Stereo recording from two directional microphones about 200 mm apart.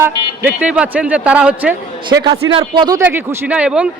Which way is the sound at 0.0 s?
10° right (ahead or behind).